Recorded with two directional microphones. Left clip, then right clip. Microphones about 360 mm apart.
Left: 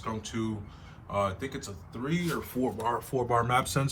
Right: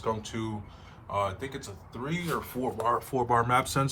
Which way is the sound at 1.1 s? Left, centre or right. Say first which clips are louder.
Even; right.